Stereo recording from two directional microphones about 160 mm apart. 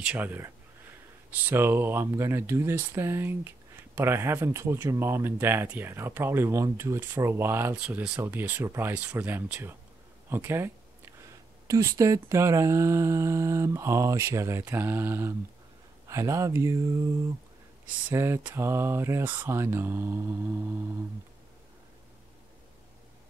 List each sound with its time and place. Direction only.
0.0 s speech: 10° right (ahead or behind)
10.3 s a sound: 15° right (ahead or behind)
11.6 s speech: 20° right (ahead or behind)
18.1 s speech: 15° right (ahead or behind)